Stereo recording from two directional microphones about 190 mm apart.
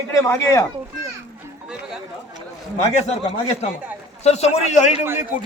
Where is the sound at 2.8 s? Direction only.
35° left (ahead or behind).